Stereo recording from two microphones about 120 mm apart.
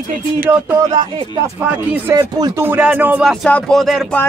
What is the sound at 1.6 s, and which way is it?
Speech, 15° right (ahead or behind).